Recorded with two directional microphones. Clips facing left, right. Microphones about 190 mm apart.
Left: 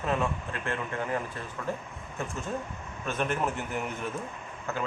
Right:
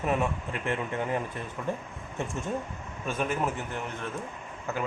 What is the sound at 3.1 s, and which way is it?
Speech, 5° right (ahead or behind).